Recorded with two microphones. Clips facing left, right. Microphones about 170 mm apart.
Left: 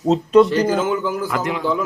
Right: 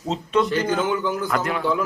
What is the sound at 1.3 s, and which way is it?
Speech, 15° left (ahead or behind).